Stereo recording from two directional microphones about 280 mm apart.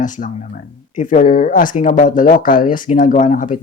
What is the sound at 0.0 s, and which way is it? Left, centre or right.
Speech, left.